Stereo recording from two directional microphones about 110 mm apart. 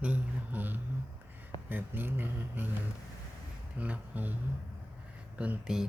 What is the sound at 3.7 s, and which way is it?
Speech, 10° right (ahead or behind).